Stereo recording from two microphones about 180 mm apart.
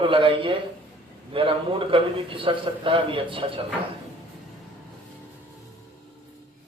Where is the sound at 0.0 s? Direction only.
30° right (ahead or behind).